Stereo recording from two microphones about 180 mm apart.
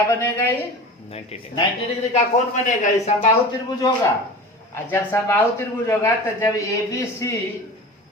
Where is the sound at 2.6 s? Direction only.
45° left (ahead or behind).